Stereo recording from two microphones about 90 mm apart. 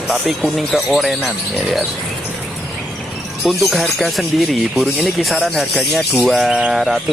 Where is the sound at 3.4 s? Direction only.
Centre (ahead or behind).